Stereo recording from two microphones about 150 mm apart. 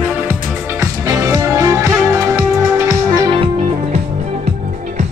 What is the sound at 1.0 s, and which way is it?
Music, 20° right (ahead or behind).